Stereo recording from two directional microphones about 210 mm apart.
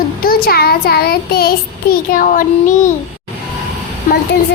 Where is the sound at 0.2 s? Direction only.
45° left (ahead or behind).